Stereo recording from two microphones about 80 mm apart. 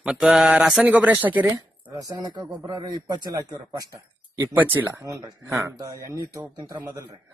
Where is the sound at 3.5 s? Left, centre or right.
Right.